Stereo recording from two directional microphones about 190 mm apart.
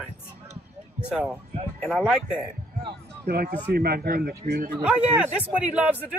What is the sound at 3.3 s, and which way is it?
A man's voice, 50° right (ahead or behind).